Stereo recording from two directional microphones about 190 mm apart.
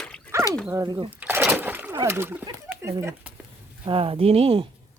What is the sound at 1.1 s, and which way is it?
Splash, 10° right (ahead or behind).